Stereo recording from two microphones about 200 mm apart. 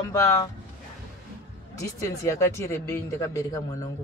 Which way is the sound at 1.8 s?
15° left (ahead or behind).